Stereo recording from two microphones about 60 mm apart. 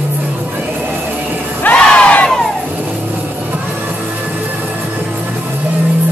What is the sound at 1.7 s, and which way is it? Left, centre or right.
Crowd, centre.